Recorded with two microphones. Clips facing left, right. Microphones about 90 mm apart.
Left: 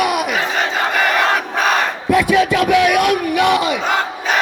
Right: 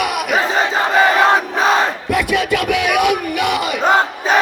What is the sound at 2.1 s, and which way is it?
Music, 5° right (ahead or behind).